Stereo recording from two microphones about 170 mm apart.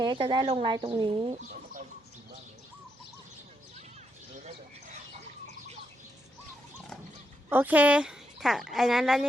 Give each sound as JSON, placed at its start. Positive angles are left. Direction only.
{"t": 0.0, "sound": "speech", "side_deg": -25}
{"t": 7.5, "sound": "speech", "side_deg": -10}